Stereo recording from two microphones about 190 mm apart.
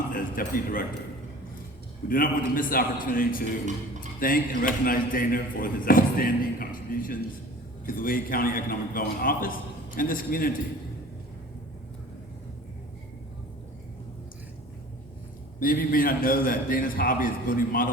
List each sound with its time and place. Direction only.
0.1 s speech: 45° left (ahead or behind)
2.0 s speech: 45° left (ahead or behind)
15.6 s speech: 50° left (ahead or behind)